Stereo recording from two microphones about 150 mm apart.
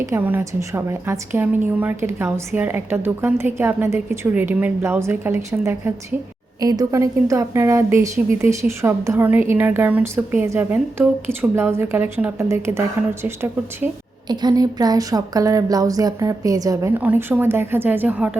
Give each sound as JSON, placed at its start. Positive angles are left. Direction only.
{"t": 0.0, "sound": "a woman's voice", "side_deg": -15}
{"t": 14.3, "sound": "speech", "side_deg": -25}
{"t": 17.0, "sound": "a woman's voice", "side_deg": -10}